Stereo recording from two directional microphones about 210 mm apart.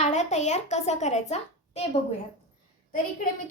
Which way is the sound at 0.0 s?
35° left (ahead or behind).